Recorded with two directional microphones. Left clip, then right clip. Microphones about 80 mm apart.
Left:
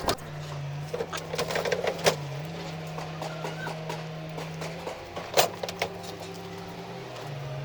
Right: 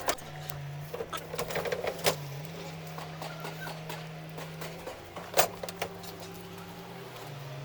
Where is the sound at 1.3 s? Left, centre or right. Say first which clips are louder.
Left 5 dB; centre.